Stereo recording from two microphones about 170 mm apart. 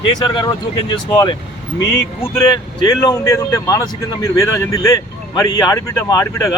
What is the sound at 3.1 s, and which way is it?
Speech, 20° left (ahead or behind).